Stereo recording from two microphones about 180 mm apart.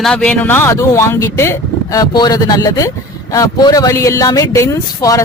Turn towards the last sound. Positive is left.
turn(degrees=20)  # may be behind; listen again after turning